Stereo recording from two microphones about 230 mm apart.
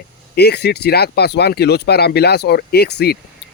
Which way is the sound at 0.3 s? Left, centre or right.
Left.